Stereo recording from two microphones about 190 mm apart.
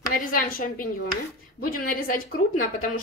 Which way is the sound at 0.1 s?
50° left (ahead or behind).